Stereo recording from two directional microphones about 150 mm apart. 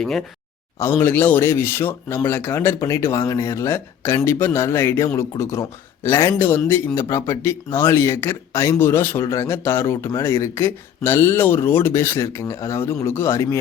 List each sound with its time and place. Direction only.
0.0 s speech: 5° left (ahead or behind)